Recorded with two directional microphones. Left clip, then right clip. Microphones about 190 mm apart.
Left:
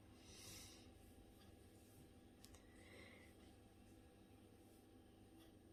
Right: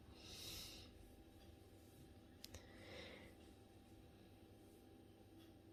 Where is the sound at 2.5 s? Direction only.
30° right (ahead or behind).